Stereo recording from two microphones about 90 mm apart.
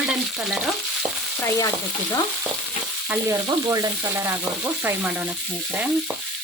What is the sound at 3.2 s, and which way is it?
Frying, 30° right (ahead or behind).